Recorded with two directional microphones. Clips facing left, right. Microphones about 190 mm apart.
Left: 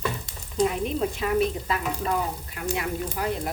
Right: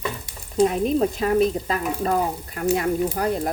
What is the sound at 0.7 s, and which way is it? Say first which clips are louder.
Speech: right 6 dB; 40° right (ahead or behind).